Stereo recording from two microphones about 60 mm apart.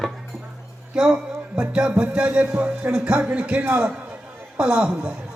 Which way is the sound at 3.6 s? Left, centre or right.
Right.